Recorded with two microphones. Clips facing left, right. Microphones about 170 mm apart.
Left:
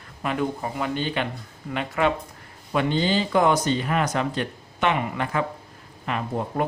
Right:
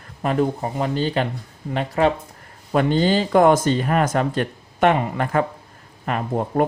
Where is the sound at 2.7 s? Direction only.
45° right (ahead or behind).